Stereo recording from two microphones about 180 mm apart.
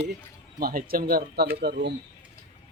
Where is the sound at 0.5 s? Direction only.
55° right (ahead or behind).